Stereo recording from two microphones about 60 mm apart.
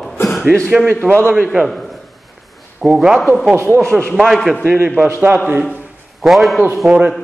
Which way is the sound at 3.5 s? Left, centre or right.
Right.